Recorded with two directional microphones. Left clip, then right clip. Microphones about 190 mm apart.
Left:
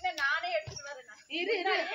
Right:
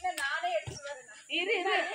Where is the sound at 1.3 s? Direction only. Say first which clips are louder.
Right 1 dB; 20° left (ahead or behind).